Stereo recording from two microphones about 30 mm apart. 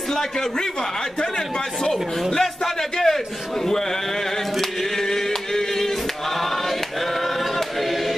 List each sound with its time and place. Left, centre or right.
0.1 s a man's voice: centre
2.4 s a sound: centre
4.6 s chant: centre